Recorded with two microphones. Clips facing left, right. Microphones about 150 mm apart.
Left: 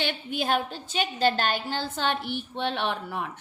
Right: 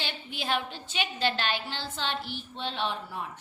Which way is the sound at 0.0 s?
55° left (ahead or behind).